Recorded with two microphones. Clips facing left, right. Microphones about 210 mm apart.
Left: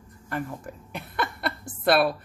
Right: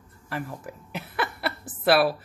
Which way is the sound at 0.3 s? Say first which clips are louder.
Left 1 dB; 5° right (ahead or behind).